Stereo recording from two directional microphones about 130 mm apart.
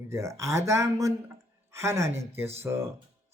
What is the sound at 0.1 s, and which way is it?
Speech, 25° right (ahead or behind).